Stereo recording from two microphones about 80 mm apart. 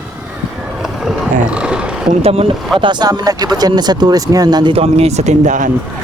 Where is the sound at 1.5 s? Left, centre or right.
Centre.